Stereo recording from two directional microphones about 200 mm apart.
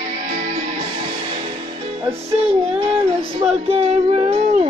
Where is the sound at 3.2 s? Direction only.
30° right (ahead or behind).